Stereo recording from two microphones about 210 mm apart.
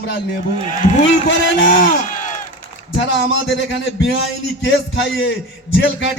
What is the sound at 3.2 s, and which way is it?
Speech, 65° left (ahead or behind).